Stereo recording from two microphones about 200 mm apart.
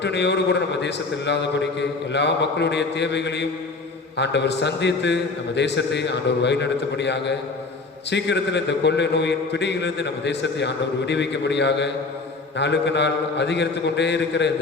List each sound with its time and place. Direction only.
0.0 s a man's voice: 60° left (ahead or behind)